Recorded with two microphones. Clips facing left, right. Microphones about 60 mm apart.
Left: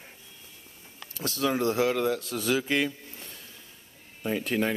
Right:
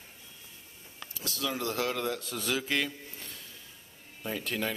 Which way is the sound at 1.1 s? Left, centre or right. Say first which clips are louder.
Left 7 dB; left.